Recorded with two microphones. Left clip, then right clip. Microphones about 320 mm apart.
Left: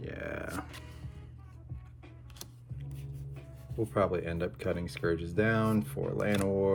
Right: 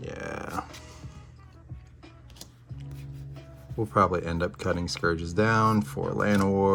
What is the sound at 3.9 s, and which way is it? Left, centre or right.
Speech, centre.